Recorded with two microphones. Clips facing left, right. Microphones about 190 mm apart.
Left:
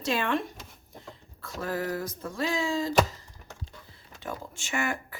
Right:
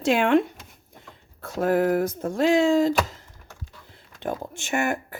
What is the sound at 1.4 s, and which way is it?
Speech, 55° right (ahead or behind).